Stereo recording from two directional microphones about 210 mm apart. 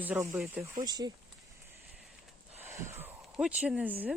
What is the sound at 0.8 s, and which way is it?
Speech, 20° right (ahead or behind).